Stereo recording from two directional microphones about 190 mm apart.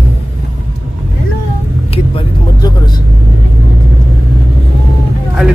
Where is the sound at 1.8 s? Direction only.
25° left (ahead or behind).